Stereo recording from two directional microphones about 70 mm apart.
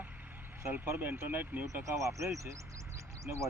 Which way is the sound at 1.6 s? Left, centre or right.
Right.